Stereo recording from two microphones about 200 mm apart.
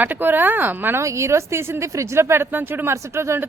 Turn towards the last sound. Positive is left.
turn(degrees=-15)  # may be behind; listen again after turning